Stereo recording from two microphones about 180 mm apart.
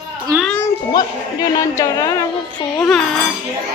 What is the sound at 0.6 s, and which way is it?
A child's voice, 20° left (ahead or behind).